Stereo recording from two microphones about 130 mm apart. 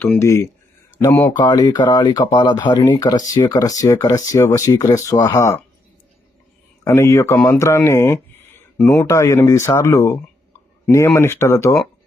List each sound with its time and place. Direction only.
0.0 s speech: 20° left (ahead or behind)
1.3 s speech: 35° left (ahead or behind)
6.8 s speech: 20° left (ahead or behind)